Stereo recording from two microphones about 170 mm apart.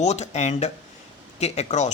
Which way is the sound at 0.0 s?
40° left (ahead or behind).